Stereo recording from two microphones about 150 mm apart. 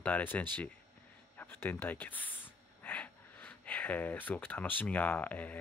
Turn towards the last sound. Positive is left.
turn(degrees=10)  # may be behind; listen again after turning